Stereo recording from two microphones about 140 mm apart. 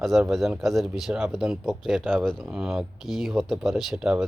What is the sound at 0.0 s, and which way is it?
Speech, centre (ahead or behind).